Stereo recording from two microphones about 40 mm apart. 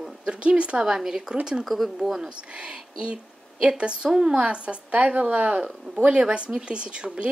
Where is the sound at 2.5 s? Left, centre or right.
Right.